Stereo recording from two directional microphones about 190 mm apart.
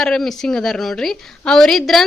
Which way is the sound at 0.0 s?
5° left (ahead or behind).